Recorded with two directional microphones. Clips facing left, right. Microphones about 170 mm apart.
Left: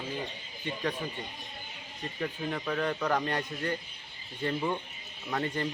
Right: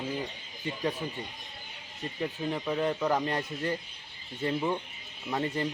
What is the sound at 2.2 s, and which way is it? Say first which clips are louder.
Speech: right 2 dB; 15° right (ahead or behind).